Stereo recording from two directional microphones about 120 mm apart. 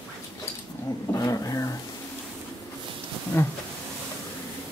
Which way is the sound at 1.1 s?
30° left (ahead or behind).